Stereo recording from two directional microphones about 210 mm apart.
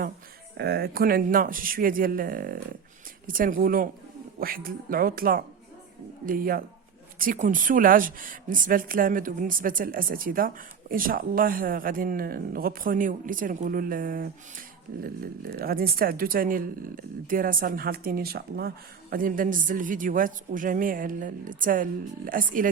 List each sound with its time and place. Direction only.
0.5 s speech: 50° right (ahead or behind)